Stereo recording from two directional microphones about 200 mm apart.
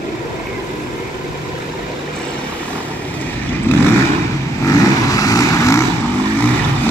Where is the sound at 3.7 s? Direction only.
10° left (ahead or behind).